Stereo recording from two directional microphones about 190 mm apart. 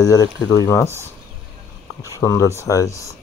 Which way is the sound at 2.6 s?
15° left (ahead or behind).